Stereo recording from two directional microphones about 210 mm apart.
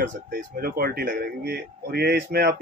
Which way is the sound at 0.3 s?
45° right (ahead or behind).